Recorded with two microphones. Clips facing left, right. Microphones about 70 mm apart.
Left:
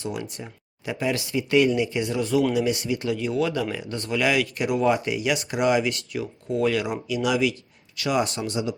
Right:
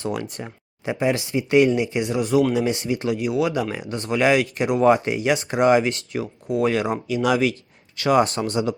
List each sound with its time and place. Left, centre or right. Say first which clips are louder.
0.0 s speech: right 4 dB; right
0.9 s speech: right 4 dB; right